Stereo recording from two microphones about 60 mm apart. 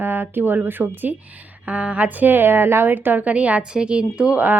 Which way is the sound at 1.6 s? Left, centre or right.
Right.